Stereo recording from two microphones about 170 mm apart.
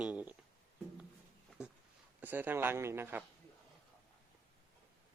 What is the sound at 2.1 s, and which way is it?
A man's voice, 10° right (ahead or behind).